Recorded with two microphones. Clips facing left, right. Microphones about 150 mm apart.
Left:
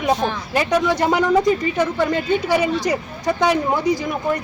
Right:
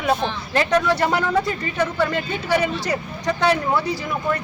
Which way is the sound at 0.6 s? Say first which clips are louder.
Even; 15° left (ahead or behind).